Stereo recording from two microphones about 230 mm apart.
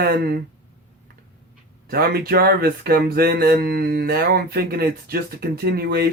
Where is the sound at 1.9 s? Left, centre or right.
Right.